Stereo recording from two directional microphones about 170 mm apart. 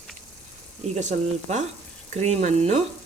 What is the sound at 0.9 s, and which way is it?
Frying, 45° right (ahead or behind).